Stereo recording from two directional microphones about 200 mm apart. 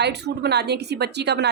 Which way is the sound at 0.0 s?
55° right (ahead or behind).